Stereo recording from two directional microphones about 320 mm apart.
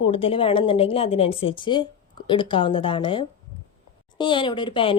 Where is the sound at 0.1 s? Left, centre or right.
Centre.